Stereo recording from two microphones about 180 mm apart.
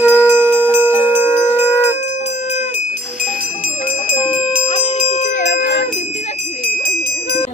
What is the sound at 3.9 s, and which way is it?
Bell, 40° left (ahead or behind).